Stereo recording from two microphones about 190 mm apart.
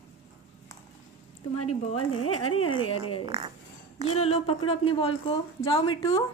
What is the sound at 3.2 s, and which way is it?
Speech, 30° right (ahead or behind).